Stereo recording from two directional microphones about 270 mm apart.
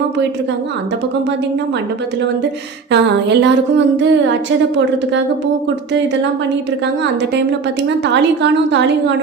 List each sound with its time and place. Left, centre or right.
2.9 s a woman's voice: right
7.9 s a woman's voice: right